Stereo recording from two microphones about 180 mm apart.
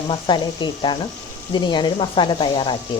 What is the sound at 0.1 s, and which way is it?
Speech, 25° left (ahead or behind).